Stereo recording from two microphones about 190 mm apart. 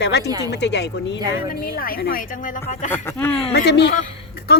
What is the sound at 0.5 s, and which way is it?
Speech, 65° left (ahead or behind).